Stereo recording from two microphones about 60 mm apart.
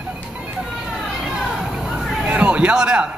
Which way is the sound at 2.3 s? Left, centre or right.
Centre.